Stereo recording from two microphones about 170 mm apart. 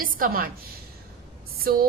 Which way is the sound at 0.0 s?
55° right (ahead or behind).